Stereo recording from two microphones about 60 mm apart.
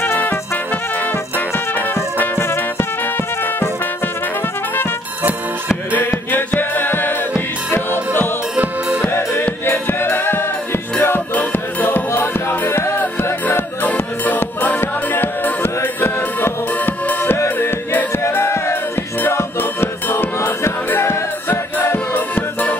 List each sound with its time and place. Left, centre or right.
0.0 s music: left
2.1 s music: left
5.9 s music: left
8.5 s music: right
9.1 s music: left
13.0 s music: left